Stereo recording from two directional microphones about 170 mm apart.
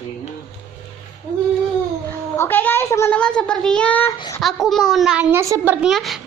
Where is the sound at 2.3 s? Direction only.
10° left (ahead or behind).